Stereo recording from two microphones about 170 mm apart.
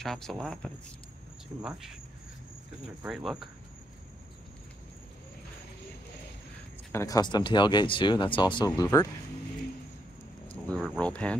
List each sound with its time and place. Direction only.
0.0 s speech: centre (ahead or behind)
3.0 s speech: 5° right (ahead or behind)
6.9 s speech: 20° left (ahead or behind)
10.5 s speech: 5° left (ahead or behind)